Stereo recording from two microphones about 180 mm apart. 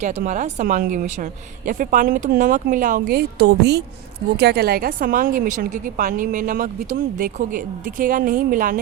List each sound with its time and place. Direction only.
0.0 s a woman's voice: 40° right (ahead or behind)